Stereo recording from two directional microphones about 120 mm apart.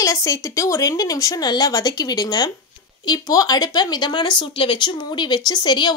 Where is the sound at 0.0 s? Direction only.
25° left (ahead or behind).